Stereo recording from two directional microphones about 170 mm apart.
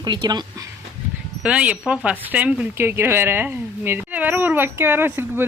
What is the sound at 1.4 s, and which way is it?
Speech, 5° right (ahead or behind).